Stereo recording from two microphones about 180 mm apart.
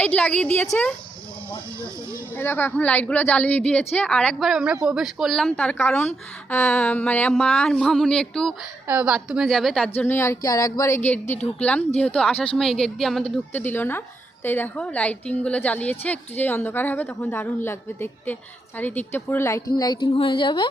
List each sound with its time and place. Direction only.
0.0 s a woman's voice: 10° left (ahead or behind)
2.3 s a woman's voice: 10° left (ahead or behind)
9.9 s a woman's voice: 10° left (ahead or behind); by 20.7 s 25° left (ahead or behind)